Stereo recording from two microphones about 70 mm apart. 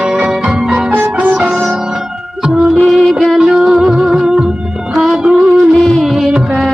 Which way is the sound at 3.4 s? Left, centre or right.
Centre.